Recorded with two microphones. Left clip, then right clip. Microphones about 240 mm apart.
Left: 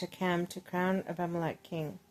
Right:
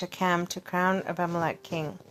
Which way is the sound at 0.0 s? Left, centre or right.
Centre.